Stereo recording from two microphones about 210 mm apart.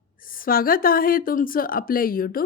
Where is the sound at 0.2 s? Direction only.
40° left (ahead or behind).